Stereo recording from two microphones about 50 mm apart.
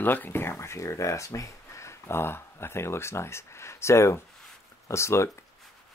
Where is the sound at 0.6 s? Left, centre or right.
Left.